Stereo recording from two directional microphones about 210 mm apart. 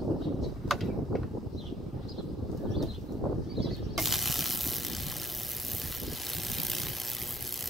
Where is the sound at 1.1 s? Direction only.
Centre (ahead or behind).